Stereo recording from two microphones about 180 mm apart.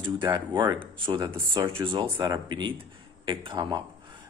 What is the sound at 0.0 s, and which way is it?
Speech, 25° right (ahead or behind).